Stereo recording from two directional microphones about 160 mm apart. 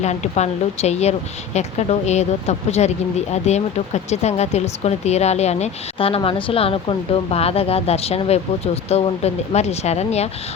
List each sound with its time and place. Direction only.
0.0 s speech: 45° left (ahead or behind)